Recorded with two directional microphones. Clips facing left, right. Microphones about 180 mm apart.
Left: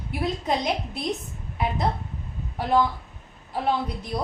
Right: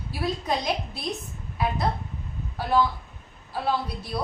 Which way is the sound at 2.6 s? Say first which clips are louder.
Left 1 dB; 20° left (ahead or behind).